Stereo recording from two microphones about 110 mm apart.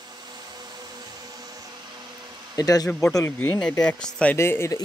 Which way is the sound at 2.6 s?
35° left (ahead or behind).